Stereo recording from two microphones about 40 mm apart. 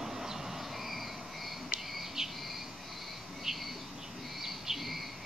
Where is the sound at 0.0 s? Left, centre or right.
Centre.